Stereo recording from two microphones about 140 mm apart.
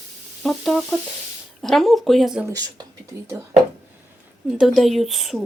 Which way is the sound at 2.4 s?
25° right (ahead or behind).